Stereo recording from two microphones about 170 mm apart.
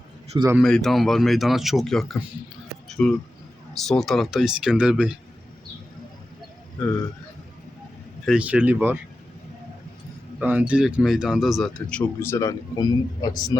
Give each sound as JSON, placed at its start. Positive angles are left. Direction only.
{"t": 0.3, "sound": "speech", "side_deg": -15}
{"t": 0.6, "sound": "speech", "side_deg": 0}
{"t": 8.2, "sound": "speech", "side_deg": -5}
{"t": 10.4, "sound": "speech", "side_deg": -10}